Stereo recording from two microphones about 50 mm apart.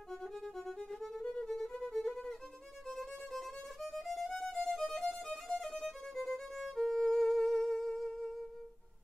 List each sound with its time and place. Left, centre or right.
0.1 s violin: centre